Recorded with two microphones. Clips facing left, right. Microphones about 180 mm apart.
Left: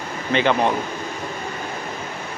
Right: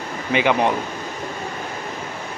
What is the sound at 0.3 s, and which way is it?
Speech, 10° right (ahead or behind).